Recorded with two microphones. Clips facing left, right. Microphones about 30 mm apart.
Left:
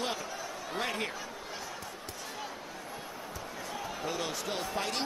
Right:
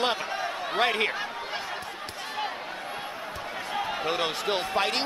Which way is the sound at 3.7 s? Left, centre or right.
Right.